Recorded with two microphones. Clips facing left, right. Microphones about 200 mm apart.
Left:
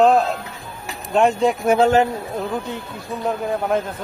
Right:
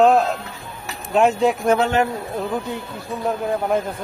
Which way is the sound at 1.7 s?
30° left (ahead or behind).